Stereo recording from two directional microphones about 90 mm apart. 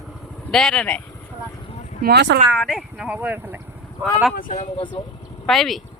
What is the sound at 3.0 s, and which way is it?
Speech, 15° right (ahead or behind).